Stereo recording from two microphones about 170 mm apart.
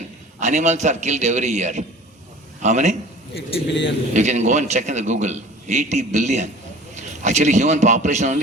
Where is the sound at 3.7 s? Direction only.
90° left.